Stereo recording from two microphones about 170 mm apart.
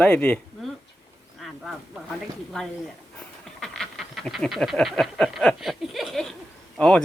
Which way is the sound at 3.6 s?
Centre (ahead or behind).